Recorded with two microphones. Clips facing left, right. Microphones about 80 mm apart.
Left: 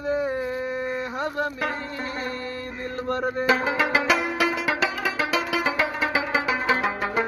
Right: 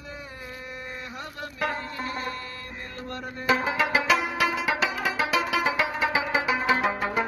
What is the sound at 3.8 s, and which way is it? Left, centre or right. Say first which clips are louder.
Music: left 1 dB; centre.